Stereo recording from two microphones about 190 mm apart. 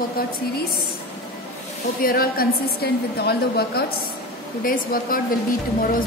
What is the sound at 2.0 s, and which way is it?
Speech, 50° left (ahead or behind).